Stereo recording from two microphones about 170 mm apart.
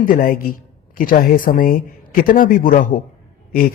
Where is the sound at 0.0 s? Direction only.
60° left (ahead or behind).